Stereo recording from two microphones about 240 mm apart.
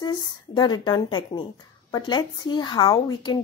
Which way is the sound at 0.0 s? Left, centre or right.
Centre.